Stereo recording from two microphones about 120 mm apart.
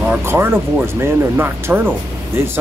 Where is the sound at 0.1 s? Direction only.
20° right (ahead or behind).